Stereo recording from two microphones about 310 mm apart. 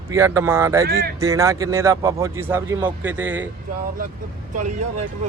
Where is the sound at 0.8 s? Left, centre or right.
Right.